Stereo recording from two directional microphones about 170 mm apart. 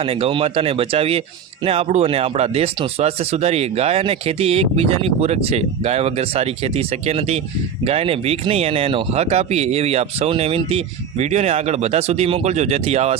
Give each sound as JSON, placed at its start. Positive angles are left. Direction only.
{"t": 0.0, "sound": "speech", "side_deg": -35}